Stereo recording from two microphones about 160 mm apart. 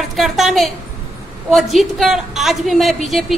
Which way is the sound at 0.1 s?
Centre (ahead or behind).